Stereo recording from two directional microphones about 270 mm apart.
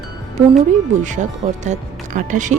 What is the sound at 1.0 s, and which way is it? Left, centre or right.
Speech, right.